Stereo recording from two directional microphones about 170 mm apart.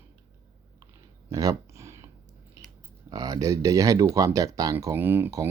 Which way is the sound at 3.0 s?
20° right (ahead or behind).